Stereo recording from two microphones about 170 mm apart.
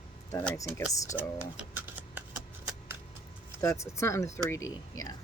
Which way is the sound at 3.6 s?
15° left (ahead or behind).